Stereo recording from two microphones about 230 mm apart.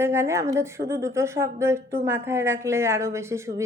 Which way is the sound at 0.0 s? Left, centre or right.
Centre.